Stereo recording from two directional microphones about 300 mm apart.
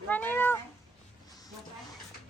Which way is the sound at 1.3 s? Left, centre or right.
Centre.